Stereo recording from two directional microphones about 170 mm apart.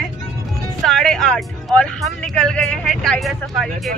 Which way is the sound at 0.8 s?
Centre (ahead or behind).